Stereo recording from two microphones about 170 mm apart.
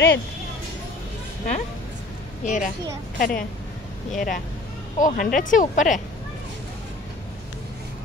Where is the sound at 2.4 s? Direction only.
50° left (ahead or behind).